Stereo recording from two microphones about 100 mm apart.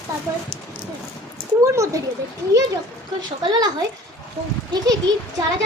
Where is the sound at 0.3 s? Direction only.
25° right (ahead or behind).